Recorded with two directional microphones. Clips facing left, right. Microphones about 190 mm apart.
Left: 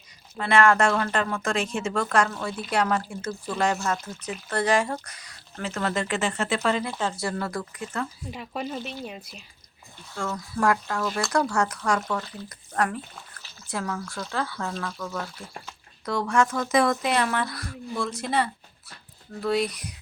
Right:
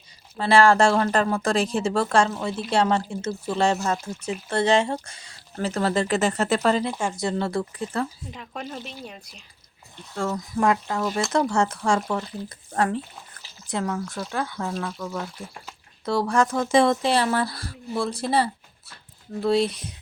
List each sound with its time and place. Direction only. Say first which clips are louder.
0.3 s speech: right 3 dB; 30° right (ahead or behind)
6.8 s speech: right 3 dB; 15° right (ahead or behind); by 8.0 s 30° right (ahead or behind)
8.3 s speech: left 3 dB; 10° left (ahead or behind)
10.3 s speech: right 1 dB; 20° right (ahead or behind)
16.0 s speech: right 2 dB; 35° right (ahead or behind)